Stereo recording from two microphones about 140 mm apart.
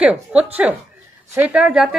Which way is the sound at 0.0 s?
10° right (ahead or behind).